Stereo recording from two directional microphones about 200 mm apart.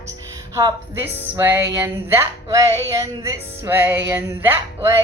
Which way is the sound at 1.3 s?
10° right (ahead or behind).